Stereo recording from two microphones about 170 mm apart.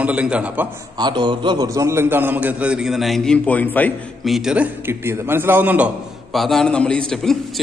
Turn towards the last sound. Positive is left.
turn(degrees=5)  # may be behind; listen again after turning